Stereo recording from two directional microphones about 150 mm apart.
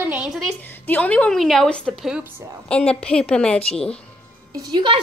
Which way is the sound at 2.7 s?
10° left (ahead or behind).